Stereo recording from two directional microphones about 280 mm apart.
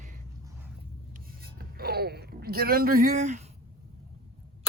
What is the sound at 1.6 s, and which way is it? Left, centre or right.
Speech, right.